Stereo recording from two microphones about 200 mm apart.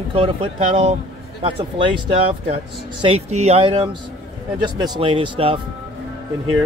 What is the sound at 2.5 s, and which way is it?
Speech, 30° right (ahead or behind).